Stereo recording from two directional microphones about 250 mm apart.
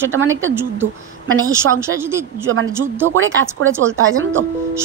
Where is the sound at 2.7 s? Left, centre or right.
Centre.